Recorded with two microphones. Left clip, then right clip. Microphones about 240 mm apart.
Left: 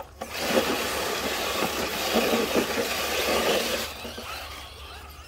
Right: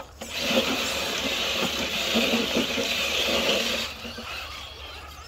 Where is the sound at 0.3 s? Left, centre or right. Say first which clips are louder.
Even; left.